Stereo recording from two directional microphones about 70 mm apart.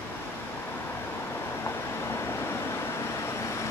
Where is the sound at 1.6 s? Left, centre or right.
Left.